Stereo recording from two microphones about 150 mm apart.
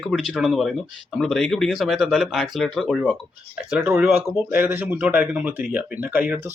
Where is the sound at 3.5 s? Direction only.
10° right (ahead or behind).